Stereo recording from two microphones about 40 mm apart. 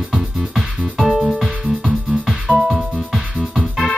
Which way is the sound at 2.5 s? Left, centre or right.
Right.